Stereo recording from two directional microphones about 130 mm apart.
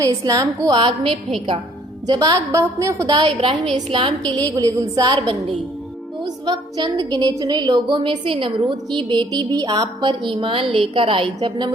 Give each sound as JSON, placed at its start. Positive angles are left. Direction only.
{"t": 0.0, "sound": "a woman's voice", "side_deg": -25}
{"t": 0.8, "sound": "a woman's voice", "side_deg": -40}
{"t": 2.0, "sound": "a woman's voice", "side_deg": -30}
{"t": 3.8, "sound": "a woman's voice", "side_deg": -40}
{"t": 4.4, "sound": "a woman's voice", "side_deg": -30}
{"t": 6.2, "sound": "a woman's voice", "side_deg": -35}